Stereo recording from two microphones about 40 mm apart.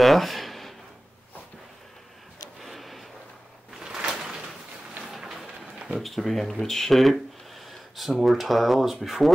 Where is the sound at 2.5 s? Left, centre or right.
Centre.